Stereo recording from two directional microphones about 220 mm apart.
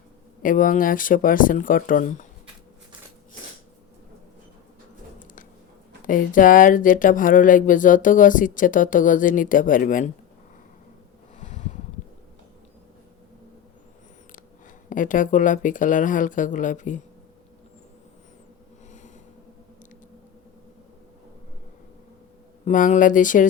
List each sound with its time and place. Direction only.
0.4 s speech: 40° left (ahead or behind)
6.1 s speech: 35° left (ahead or behind)
11.3 s a sound: 30° left (ahead or behind)
14.8 s speech: 35° left (ahead or behind)
22.6 s speech: 35° left (ahead or behind)